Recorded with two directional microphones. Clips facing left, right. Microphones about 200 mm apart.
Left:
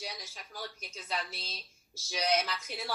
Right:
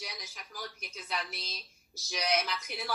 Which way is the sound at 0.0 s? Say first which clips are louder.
Left 2 dB; 30° left (ahead or behind).